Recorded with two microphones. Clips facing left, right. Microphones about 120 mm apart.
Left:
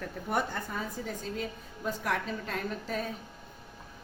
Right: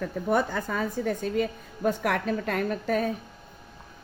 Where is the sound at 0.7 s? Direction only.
70° right (ahead or behind).